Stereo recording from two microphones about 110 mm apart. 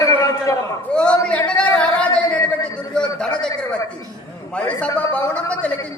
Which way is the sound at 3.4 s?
10° left (ahead or behind).